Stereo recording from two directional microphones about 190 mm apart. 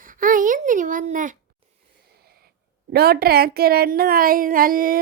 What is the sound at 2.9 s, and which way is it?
A woman's voice, 55° right (ahead or behind).